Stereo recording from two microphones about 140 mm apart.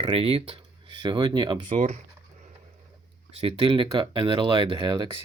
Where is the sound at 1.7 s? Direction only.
60° right (ahead or behind).